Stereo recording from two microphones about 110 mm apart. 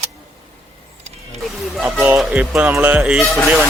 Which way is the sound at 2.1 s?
5° right (ahead or behind).